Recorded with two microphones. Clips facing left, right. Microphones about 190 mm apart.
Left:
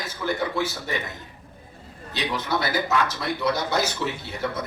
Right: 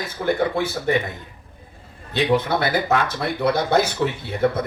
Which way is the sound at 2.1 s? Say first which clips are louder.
Right 8 dB; 55° right (ahead or behind).